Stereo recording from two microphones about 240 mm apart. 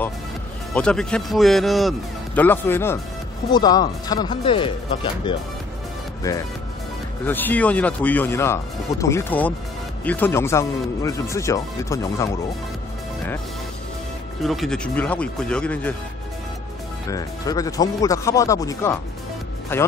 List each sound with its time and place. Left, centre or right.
0.7 s speech: centre; by 5.3 s left
7.2 s speech: centre
14.4 s speech: centre
17.1 s speech: centre